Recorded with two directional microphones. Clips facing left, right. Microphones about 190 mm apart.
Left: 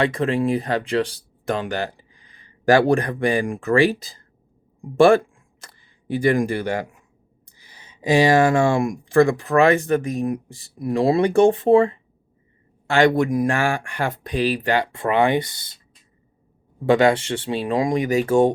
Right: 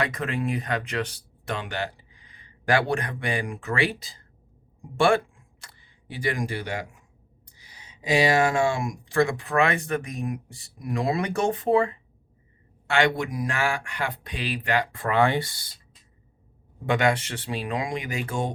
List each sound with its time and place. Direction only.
0.0 s speech: 30° left (ahead or behind); by 4.2 s 45° left (ahead or behind)
4.9 s a sound: 40° left (ahead or behind)
6.1 s speech: 50° left (ahead or behind)
8.5 s speech: 55° left (ahead or behind); by 11.9 s 30° left (ahead or behind)
12.9 s speech: 40° left (ahead or behind); by 15.7 s 20° left (ahead or behind)
16.8 s speech: 35° left (ahead or behind)